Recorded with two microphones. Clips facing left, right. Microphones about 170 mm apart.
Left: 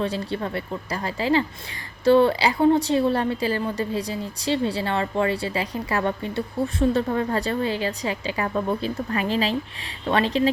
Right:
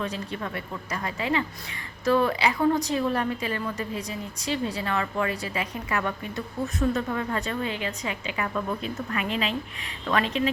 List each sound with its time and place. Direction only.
0.0 s a woman's voice: 30° left (ahead or behind)